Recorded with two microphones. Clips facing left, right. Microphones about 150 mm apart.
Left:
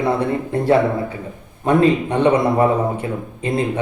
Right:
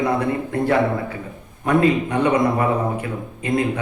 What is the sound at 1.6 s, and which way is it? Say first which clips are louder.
A man's voice: left 2 dB; 30° left (ahead or behind).